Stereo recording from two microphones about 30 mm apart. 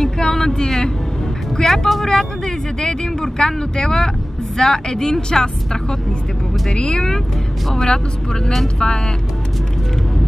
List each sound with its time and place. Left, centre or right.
0.2 s vehicle: centre
1.6 s speech: centre
2.0 s speech: left